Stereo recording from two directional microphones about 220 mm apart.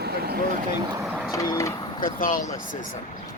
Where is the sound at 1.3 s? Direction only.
15° left (ahead or behind).